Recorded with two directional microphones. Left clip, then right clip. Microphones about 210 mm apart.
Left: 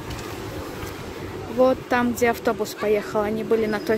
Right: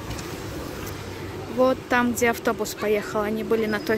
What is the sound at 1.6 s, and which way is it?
Speech, 5° left (ahead or behind).